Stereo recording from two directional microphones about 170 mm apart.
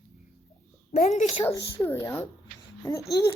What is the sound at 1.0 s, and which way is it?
Speech, 45° left (ahead or behind).